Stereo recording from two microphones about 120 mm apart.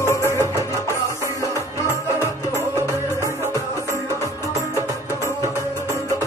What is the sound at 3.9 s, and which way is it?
Music, 25° right (ahead or behind).